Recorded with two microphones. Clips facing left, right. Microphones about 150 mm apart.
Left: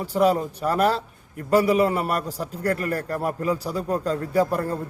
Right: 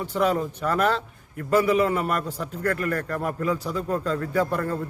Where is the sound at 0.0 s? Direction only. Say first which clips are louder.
Left 3 dB; 35° left (ahead or behind).